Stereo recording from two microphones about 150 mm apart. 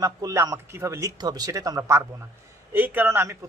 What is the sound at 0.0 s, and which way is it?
A man's voice, 20° right (ahead or behind).